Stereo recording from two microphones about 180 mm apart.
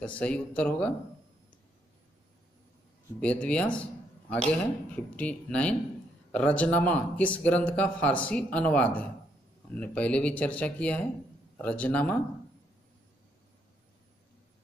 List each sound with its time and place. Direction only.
0.0 s speech: 5° left (ahead or behind)
3.2 s speech: 5° left (ahead or behind)